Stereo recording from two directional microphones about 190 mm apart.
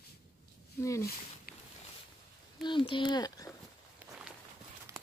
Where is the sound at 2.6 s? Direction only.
25° left (ahead or behind).